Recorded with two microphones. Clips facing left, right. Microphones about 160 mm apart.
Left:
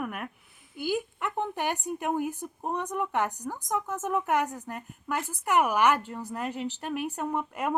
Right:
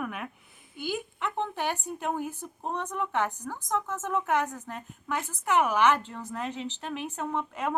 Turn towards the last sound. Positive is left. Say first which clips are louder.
# left 1 dB
turn(degrees=10)  # may be behind; listen again after turning